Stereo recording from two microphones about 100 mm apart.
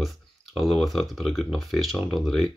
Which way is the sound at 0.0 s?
Centre (ahead or behind).